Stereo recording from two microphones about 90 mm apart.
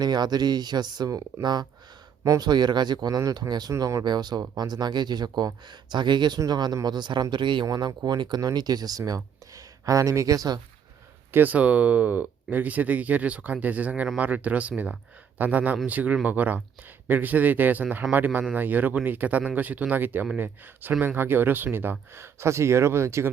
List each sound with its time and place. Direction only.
0.0 s speech: 50° right (ahead or behind)
3.7 s speech: 35° right (ahead or behind)
4.0 s speech: 50° right (ahead or behind)
7.7 s speech: 45° right (ahead or behind)
11.3 s speech: 20° right (ahead or behind)